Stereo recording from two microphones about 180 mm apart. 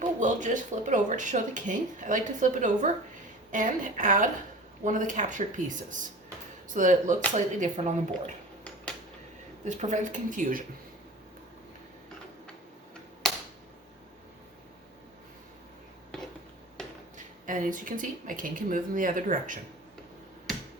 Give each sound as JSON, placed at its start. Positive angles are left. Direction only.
{"t": 0.0, "sound": "speech", "side_deg": -45}
{"t": 9.6, "sound": "speech", "side_deg": -40}
{"t": 16.8, "sound": "a sound", "side_deg": 5}
{"t": 17.4, "sound": "speech", "side_deg": -45}